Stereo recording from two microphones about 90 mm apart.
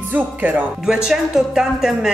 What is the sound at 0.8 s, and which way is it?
A woman's voice, 5° right (ahead or behind).